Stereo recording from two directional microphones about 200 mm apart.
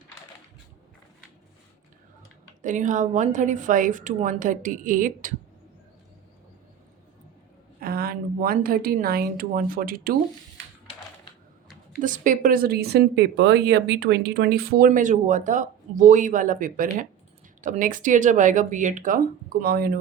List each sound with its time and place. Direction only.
2.6 s a woman's voice: 40° right (ahead or behind)
7.8 s a woman's voice: 50° right (ahead or behind)
11.9 s speech: 40° right (ahead or behind)
14.8 s a woman's voice: 40° right (ahead or behind)